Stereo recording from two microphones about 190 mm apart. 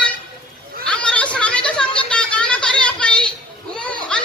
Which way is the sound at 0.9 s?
5° left (ahead or behind).